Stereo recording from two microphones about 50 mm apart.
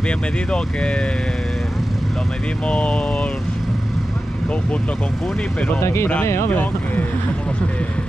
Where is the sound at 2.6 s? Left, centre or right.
Left.